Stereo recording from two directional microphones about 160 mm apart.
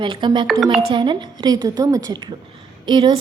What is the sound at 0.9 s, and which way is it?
A woman's voice, 30° right (ahead or behind).